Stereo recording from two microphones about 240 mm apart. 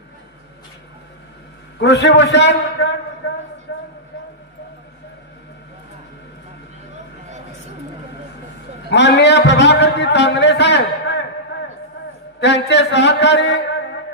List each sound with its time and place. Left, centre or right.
1.8 s a man's voice: left
8.9 s a man's voice: left
11.5 s a sound: left
12.4 s a man's voice: left